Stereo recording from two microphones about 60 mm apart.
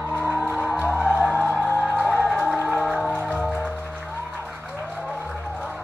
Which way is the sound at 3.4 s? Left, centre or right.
Right.